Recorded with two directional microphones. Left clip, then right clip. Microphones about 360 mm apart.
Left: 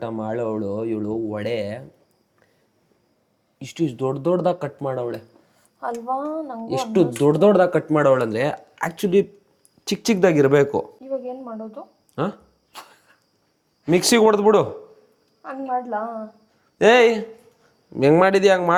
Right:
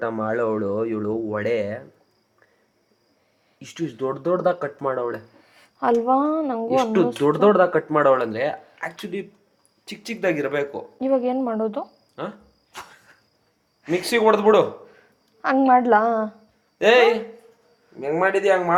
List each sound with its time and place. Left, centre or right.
0.0 s speech: centre
3.6 s speech: centre
5.5 s speech: right
6.9 s speech: centre; by 9.2 s left
9.8 s speech: left
11.0 s speech: right
12.1 s a sound: left
12.7 s a sound: centre
13.8 s speech: left
15.4 s a woman's voice: right
16.7 s speech: left